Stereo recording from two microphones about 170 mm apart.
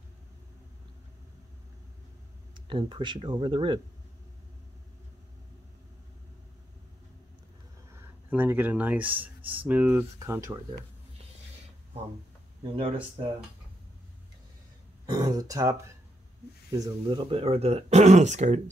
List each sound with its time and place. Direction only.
2.5 s speech: 30° right (ahead or behind)
7.9 s speech: 10° right (ahead or behind)
12.7 s speech: 35° right (ahead or behind)
15.0 s speech: 25° right (ahead or behind)
16.7 s speech: 20° right (ahead or behind)
17.3 s speech: 35° right (ahead or behind)